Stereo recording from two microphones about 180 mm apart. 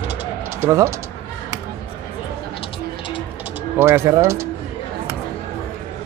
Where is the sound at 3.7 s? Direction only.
15° right (ahead or behind).